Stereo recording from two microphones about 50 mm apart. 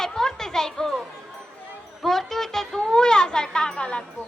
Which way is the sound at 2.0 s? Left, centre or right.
Centre.